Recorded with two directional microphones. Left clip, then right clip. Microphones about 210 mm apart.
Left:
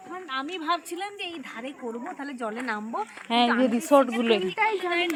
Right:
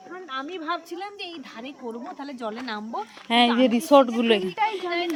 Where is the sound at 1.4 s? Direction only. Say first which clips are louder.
Left 1 dB; 15° right (ahead or behind).